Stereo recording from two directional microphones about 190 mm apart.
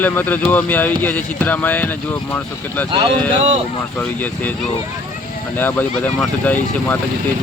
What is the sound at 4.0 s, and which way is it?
Speech, 10° left (ahead or behind).